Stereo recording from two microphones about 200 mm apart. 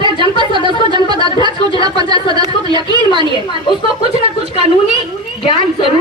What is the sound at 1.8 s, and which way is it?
A woman's voice, 20° right (ahead or behind).